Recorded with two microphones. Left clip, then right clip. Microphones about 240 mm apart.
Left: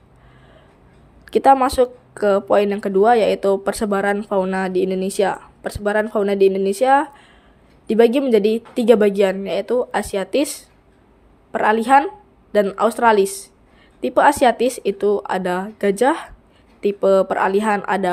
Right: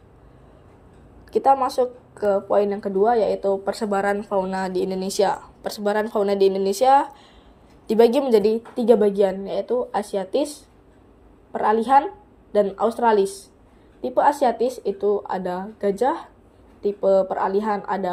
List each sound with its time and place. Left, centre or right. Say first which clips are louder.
1.2 s a woman's voice: left 5 dB; left